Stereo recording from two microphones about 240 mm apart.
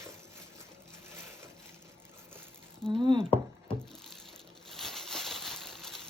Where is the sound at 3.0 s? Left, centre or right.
Centre.